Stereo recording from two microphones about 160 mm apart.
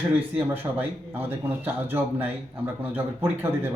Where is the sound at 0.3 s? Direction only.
10° right (ahead or behind).